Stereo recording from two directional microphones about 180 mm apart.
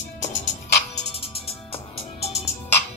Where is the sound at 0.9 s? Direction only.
35° left (ahead or behind).